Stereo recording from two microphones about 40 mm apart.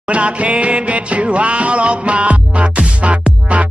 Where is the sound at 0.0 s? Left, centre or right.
Right.